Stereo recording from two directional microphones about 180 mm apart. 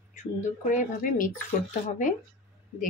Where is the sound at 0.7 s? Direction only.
50° left (ahead or behind).